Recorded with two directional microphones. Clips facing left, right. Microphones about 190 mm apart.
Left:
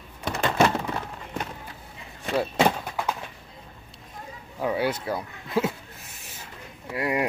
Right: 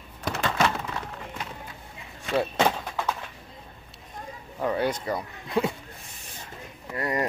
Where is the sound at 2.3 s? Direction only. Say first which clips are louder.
Left 1 dB; 10° left (ahead or behind).